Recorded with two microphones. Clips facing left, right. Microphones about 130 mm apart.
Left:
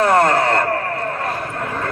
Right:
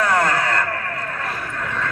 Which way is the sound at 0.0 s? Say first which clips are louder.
Left 5 dB; 25° left (ahead or behind).